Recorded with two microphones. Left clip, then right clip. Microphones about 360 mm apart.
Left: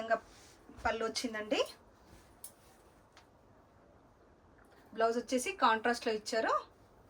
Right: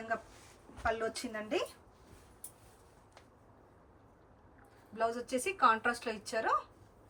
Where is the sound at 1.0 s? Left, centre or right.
Centre.